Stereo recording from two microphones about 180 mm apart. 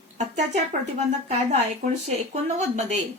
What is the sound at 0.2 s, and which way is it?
Speech, 40° right (ahead or behind).